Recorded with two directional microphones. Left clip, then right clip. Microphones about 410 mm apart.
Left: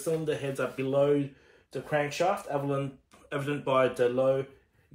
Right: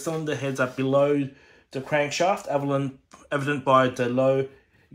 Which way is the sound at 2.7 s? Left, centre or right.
Centre.